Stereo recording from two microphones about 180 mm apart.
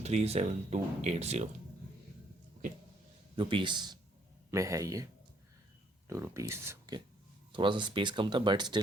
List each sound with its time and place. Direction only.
0.0 s speech: 35° right (ahead or behind)
3.3 s a man's voice: 25° right (ahead or behind)
6.1 s speech: 15° right (ahead or behind)